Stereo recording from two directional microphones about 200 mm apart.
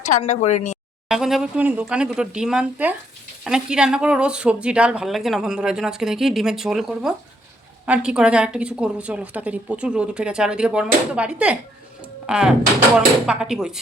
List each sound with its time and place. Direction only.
0.2 s a woman's voice: 35° left (ahead or behind)
1.0 s speech: centre (ahead or behind)